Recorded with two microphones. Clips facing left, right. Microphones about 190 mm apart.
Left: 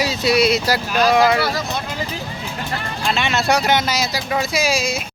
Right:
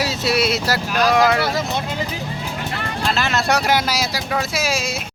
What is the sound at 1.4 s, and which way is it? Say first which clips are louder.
Speech: even; 20° right (ahead or behind).